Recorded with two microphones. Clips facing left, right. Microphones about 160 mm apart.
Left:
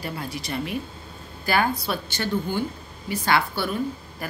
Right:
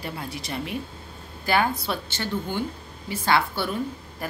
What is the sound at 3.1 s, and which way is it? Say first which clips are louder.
Speech: even; 25° right (ahead or behind).